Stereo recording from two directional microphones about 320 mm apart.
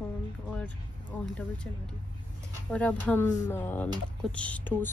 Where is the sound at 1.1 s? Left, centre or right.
Centre.